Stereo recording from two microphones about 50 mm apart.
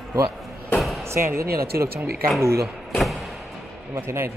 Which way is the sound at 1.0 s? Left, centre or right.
Right.